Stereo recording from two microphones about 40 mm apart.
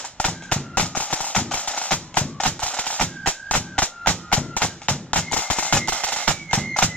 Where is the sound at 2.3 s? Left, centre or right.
Left.